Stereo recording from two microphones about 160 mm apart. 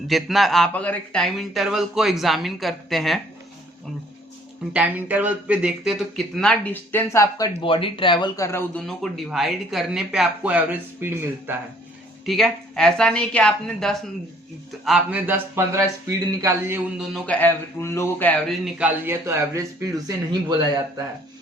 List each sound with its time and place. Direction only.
0.1 s speech: centre (ahead or behind)
4.7 s speech: 10° right (ahead or behind); by 8.4 s 30° left (ahead or behind)
8.4 s speech: 15° left (ahead or behind)
8.8 s speech: centre (ahead or behind)
12.2 s a man's voice: centre (ahead or behind); by 16.8 s 15° right (ahead or behind)
17.2 s speech: 10° left (ahead or behind)
18.5 s a man's voice: 5° right (ahead or behind); by 21.0 s 25° right (ahead or behind)